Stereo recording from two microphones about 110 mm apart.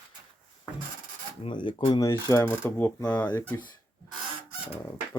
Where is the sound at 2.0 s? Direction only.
30° left (ahead or behind).